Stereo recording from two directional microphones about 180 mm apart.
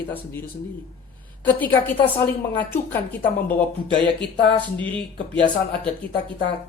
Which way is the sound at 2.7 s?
10° left (ahead or behind).